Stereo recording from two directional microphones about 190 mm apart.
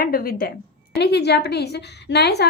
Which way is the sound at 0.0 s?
50° left (ahead or behind).